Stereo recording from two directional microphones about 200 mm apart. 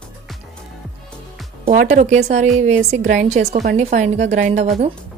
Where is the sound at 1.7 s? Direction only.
35° right (ahead or behind).